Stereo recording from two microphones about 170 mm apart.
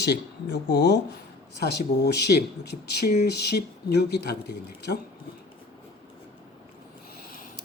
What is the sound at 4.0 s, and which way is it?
Speech, 75° left (ahead or behind).